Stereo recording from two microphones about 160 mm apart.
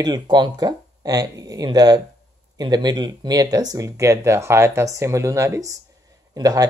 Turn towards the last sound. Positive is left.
turn(degrees=-20)  # may be behind; listen again after turning